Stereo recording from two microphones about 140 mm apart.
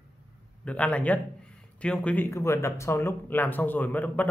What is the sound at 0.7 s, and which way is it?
A man's voice, 10° left (ahead or behind).